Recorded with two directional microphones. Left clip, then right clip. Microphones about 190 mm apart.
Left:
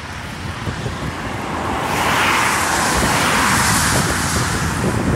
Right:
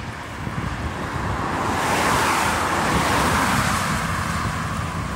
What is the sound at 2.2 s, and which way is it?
Vehicle, 50° right (ahead or behind).